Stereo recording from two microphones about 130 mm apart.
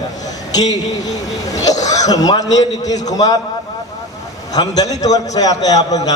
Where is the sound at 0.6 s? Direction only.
30° left (ahead or behind).